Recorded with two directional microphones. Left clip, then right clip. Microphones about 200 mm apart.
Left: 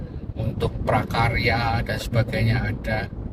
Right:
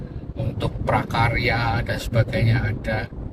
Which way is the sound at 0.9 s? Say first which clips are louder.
Right 1 dB; 20° left (ahead or behind).